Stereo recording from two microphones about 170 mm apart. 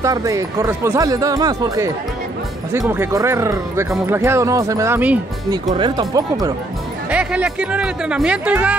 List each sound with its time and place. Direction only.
0.0 s speech: 20° right (ahead or behind)
2.9 s speech: 15° right (ahead or behind)
5.5 s speech: 25° right (ahead or behind)
7.1 s speech: 5° right (ahead or behind)